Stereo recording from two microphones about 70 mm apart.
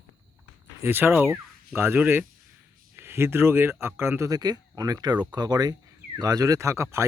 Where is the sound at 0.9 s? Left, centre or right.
Right.